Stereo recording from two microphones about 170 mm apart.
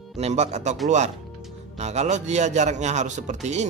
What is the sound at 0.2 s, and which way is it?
Mantra, 40° right (ahead or behind).